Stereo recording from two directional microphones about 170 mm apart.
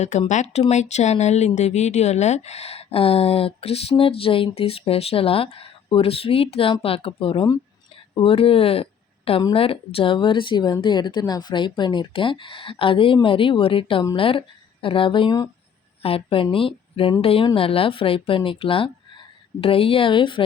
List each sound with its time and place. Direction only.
0.0 s speech: 45° left (ahead or behind)